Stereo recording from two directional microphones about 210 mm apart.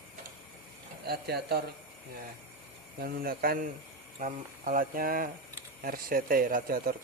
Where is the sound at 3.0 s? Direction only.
45° right (ahead or behind).